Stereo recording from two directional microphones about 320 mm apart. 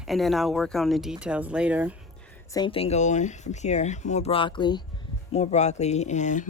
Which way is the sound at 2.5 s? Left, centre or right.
Centre.